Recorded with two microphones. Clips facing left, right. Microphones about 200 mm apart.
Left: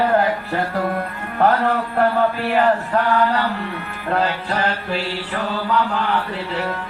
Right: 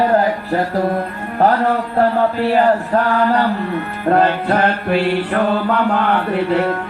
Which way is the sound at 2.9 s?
50° right (ahead or behind).